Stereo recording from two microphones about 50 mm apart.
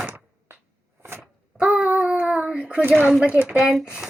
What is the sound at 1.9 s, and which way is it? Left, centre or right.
Child singing, right.